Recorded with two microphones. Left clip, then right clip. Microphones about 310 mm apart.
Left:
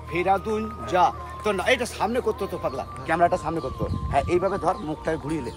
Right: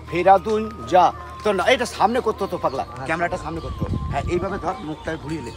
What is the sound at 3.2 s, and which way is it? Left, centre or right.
Speech, centre.